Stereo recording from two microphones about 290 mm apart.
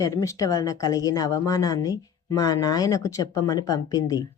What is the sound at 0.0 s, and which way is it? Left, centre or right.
Speech, centre.